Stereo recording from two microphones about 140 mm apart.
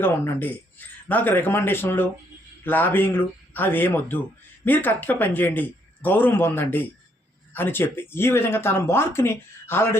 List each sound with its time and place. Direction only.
0.0 s speech: 15° left (ahead or behind)